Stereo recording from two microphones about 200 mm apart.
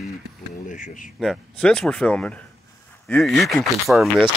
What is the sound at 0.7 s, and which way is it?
Speech, 40° left (ahead or behind).